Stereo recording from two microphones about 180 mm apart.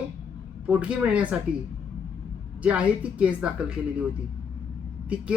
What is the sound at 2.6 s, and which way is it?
A woman's voice, 5° right (ahead or behind).